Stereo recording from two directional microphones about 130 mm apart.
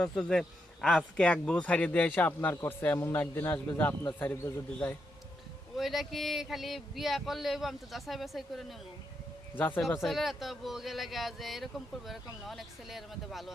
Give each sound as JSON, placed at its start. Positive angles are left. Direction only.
{"t": 0.0, "sound": "speech", "side_deg": 5}
{"t": 5.7, "sound": "speech", "side_deg": 0}
{"t": 9.6, "sound": "speech", "side_deg": 15}
{"t": 9.8, "sound": "speech", "side_deg": 0}